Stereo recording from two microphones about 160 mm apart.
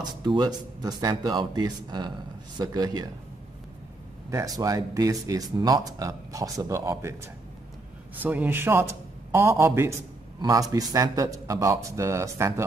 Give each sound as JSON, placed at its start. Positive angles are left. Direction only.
{"t": 0.0, "sound": "speech", "side_deg": -25}
{"t": 4.3, "sound": "speech", "side_deg": -20}
{"t": 8.2, "sound": "a man's voice", "side_deg": -10}